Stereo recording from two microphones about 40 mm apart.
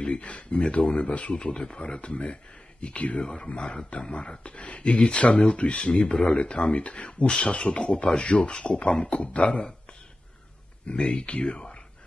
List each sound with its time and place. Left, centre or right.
0.0 s speech: left
5.8 s speech: left
10.9 s speech: left